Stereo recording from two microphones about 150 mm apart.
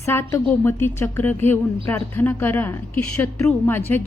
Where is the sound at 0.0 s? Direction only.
15° left (ahead or behind).